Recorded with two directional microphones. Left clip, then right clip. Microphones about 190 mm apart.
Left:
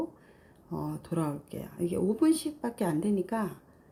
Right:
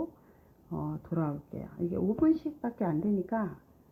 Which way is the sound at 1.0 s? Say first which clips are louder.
Left 1 dB; 35° left (ahead or behind).